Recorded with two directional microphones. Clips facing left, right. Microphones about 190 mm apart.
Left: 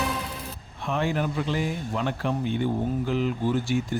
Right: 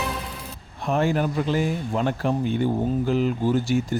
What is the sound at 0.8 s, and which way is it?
Speech, 45° right (ahead or behind).